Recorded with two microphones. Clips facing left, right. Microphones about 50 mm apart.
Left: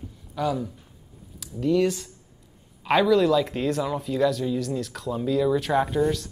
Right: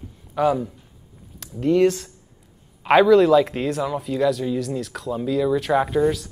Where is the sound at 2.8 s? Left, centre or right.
Right.